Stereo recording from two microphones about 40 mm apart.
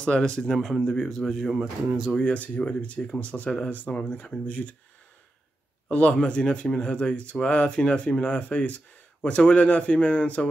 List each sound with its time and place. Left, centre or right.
0.0 s speech: left
0.4 s speech: centre
2.2 s speech: left
5.9 s a man's voice: left